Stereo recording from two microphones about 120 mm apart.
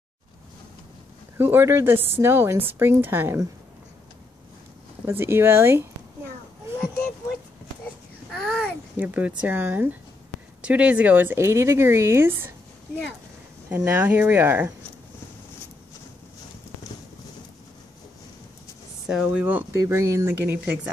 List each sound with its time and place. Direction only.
1.4 s a woman's voice: 20° right (ahead or behind)
5.0 s a woman's voice: 20° right (ahead or behind)
8.3 s babbling: 5° left (ahead or behind)
8.9 s a woman's voice: 10° right (ahead or behind)
13.7 s speech: 20° right (ahead or behind)
19.0 s a woman's voice: 10° right (ahead or behind)